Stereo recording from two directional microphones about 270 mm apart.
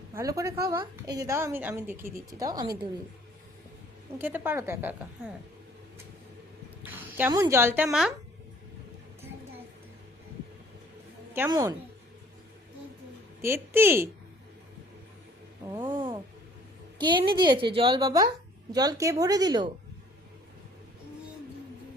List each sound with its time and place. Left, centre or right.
0.1 s a woman's voice: centre
4.2 s a woman's voice: centre
6.8 s a woman's voice: centre
11.3 s a woman's voice: centre
13.4 s a woman's voice: centre
15.7 s a woman's voice: centre